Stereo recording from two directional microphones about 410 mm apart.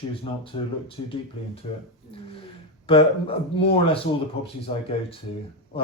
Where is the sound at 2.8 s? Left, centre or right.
Centre.